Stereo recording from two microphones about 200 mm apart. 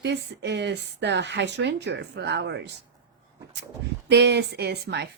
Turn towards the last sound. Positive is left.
turn(degrees=-55)  # may be behind; listen again after turning